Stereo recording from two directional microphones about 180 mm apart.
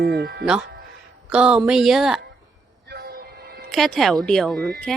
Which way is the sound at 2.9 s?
55° right (ahead or behind).